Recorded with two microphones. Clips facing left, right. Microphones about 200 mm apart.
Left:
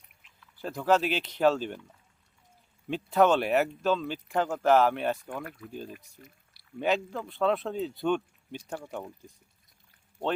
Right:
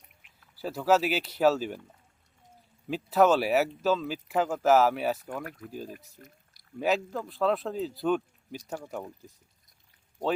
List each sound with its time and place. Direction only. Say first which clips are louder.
0.6 s speech: right 1 dB; 5° right (ahead or behind)
2.9 s speech: right 1 dB; 5° right (ahead or behind)
5.4 s speech: right 1 dB; 45° right (ahead or behind)
6.2 s a sound: right 1 dB; 45° right (ahead or behind)
6.7 s speech: right 1 dB; 5° right (ahead or behind)